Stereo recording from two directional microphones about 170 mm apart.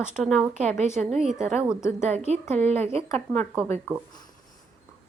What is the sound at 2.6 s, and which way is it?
Speech, 40° right (ahead or behind).